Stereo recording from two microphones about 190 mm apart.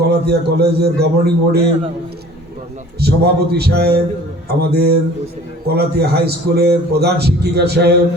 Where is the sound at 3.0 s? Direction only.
55° right (ahead or behind).